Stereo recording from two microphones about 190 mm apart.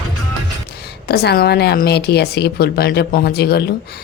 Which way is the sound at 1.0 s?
55° left (ahead or behind).